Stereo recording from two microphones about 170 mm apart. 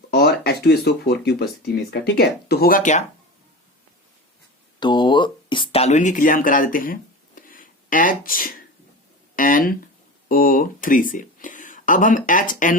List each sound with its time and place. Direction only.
0.1 s speech: 65° left (ahead or behind); by 3.0 s 50° left (ahead or behind)
4.8 s a sound: 25° left (ahead or behind); by 8.5 s 55° left (ahead or behind)
9.3 s speech: 55° left (ahead or behind)